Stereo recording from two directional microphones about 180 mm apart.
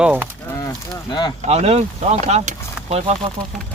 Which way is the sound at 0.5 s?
20° left (ahead or behind).